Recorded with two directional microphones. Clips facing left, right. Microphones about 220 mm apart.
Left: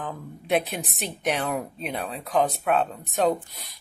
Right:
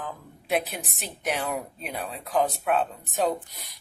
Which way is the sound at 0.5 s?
Centre (ahead or behind).